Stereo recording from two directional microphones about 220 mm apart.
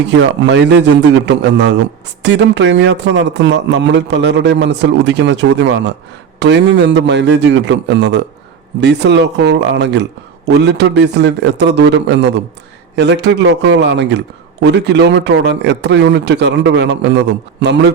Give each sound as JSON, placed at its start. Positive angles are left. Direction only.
{"t": 0.1, "sound": "a man's voice", "side_deg": -55}